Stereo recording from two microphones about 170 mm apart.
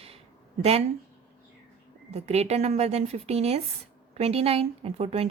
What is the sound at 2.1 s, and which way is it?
A woman's voice, 40° right (ahead or behind).